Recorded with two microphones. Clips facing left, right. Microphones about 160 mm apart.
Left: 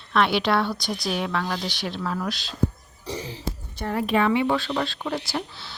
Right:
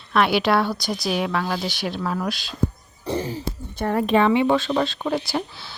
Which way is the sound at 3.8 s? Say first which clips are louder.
Right 5 dB; 55° right (ahead or behind).